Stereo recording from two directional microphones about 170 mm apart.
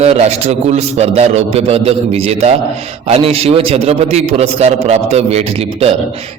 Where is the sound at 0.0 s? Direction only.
40° right (ahead or behind).